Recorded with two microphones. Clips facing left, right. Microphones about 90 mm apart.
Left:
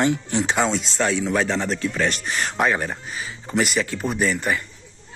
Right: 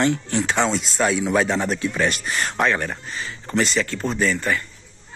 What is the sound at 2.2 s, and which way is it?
Speech, centre (ahead or behind).